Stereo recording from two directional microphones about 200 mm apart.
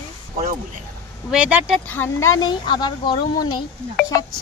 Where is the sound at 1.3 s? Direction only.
5° right (ahead or behind).